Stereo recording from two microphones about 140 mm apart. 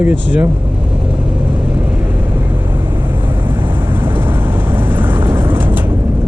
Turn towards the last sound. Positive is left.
turn(degrees=-15)  # may be behind; listen again after turning